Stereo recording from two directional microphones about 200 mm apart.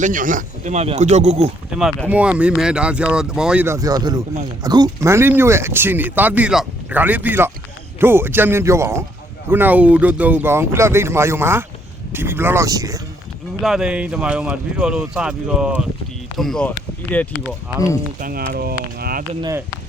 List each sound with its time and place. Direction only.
0.0 s speech: 40° right (ahead or behind)
1.7 s speech: 5° right (ahead or behind)
13.6 s speech: 5° right (ahead or behind)
18.2 s speech: 45° right (ahead or behind)
19.4 s speech: 15° right (ahead or behind)